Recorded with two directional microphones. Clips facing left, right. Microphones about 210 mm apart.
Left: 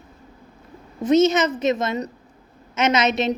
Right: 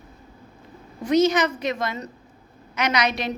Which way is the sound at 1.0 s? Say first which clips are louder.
Left 3 dB; 25° left (ahead or behind).